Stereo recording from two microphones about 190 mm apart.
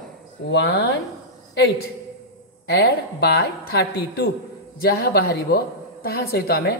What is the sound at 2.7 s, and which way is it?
A woman's voice, 60° left (ahead or behind).